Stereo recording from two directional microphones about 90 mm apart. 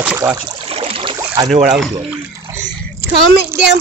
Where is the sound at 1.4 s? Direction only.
60° right (ahead or behind).